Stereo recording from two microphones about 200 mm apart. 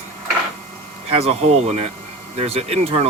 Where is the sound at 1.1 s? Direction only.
30° right (ahead or behind).